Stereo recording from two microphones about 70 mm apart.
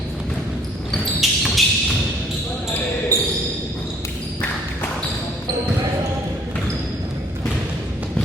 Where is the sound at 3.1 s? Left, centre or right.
Right.